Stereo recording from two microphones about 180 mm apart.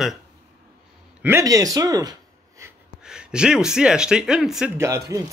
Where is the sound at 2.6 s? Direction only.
15° right (ahead or behind).